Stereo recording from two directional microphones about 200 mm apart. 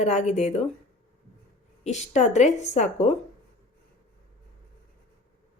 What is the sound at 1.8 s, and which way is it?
A woman's voice, 35° left (ahead or behind).